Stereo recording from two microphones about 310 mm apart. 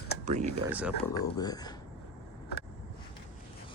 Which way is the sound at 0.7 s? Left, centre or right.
Centre.